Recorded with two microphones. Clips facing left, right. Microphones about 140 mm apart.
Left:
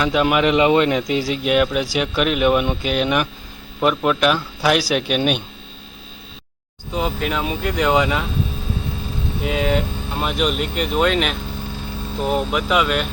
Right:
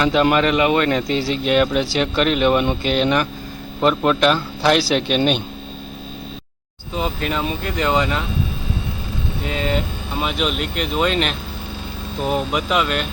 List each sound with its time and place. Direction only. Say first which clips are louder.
0.0 s speech: right 2 dB; 5° left (ahead or behind)
0.4 s a man's voice: left 2 dB; 20° left (ahead or behind)
0.9 s speech: even; 10° left (ahead or behind)
6.9 s speech: left 1 dB; 5° left (ahead or behind)
9.4 s speech: left 3 dB; 5° left (ahead or behind)